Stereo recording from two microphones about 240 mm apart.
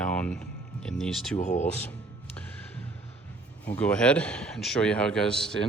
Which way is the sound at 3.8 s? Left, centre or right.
Centre.